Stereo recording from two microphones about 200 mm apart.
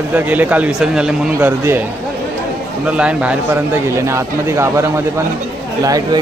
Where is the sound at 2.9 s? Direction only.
5° right (ahead or behind).